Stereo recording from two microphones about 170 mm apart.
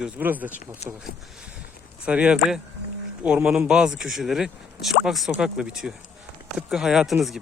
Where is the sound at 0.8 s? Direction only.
40° left (ahead or behind).